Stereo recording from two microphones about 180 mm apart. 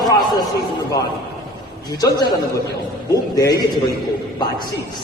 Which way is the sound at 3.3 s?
20° left (ahead or behind).